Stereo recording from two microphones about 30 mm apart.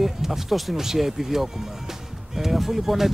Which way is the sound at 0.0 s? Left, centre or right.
Centre.